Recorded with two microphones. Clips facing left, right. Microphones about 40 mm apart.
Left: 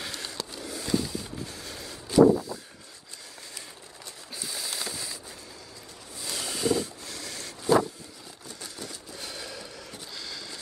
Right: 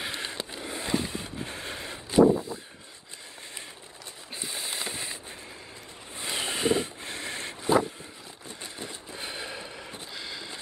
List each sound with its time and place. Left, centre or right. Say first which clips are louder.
0.0 s train: right 2 dB; right
4.4 s a sound: right 1 dB; right
6.1 s vehicle: right 3 dB; right